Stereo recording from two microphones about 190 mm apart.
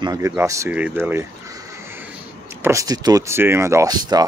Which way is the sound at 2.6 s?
20° right (ahead or behind).